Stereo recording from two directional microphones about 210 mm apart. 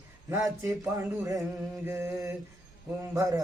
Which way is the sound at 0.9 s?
15° right (ahead or behind).